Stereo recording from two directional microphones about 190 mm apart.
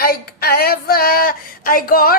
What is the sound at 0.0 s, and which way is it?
Female singing, 50° left (ahead or behind).